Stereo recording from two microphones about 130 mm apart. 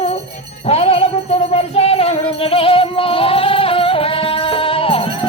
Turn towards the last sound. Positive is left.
turn(degrees=45)  # may be behind; listen again after turning